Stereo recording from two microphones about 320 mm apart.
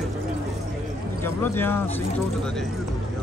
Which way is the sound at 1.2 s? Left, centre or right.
Centre.